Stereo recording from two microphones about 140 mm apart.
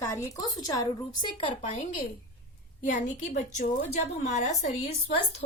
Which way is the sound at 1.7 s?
65° left (ahead or behind).